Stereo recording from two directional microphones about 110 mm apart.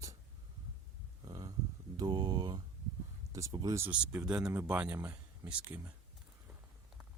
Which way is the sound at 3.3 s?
30° right (ahead or behind).